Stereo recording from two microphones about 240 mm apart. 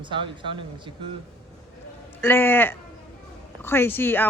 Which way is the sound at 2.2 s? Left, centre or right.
Centre.